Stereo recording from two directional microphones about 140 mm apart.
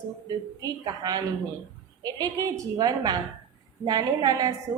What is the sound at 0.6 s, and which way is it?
A woman's voice, 25° right (ahead or behind).